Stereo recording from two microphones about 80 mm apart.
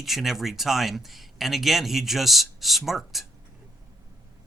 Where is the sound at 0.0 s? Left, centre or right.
Centre.